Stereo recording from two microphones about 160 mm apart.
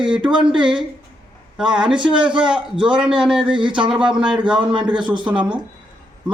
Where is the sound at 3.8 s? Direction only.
5° right (ahead or behind).